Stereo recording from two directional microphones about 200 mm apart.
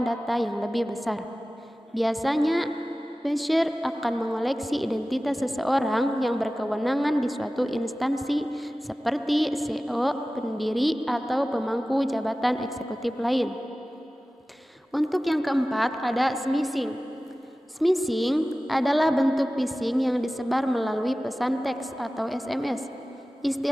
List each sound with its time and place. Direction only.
0.0 s a woman's voice: centre (ahead or behind)
14.9 s a woman's voice: centre (ahead or behind)